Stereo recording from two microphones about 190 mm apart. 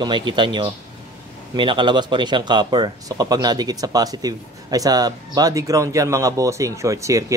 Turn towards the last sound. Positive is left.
turn(degrees=-15)  # may be behind; listen again after turning